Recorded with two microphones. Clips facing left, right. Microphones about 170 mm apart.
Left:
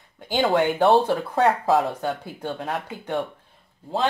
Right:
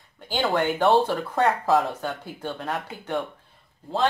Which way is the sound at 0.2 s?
15° left (ahead or behind).